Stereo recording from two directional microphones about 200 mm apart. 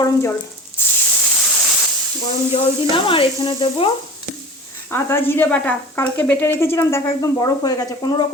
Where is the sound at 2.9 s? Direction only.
25° left (ahead or behind).